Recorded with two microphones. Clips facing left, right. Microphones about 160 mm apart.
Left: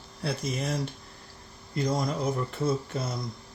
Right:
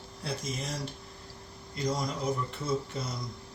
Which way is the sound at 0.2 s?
65° left (ahead or behind).